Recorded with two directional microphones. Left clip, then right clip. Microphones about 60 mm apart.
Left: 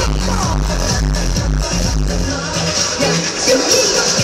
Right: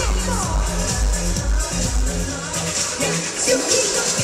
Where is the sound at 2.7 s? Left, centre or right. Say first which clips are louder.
Left 7 dB; right.